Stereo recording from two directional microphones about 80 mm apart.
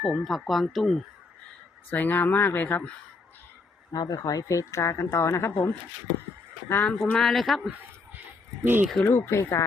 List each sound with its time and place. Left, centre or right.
0.0 s speech: centre
1.9 s speech: left
3.9 s speech: left
6.7 s speech: left
7.0 s speech: centre
8.6 s speech: right
9.0 s speech: left